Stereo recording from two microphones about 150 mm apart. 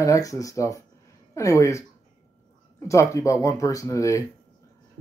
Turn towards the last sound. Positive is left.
turn(degrees=20)  # may be behind; listen again after turning